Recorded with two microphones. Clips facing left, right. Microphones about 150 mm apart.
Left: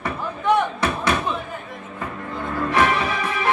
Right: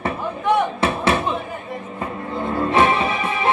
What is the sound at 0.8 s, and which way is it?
Music, 25° right (ahead or behind).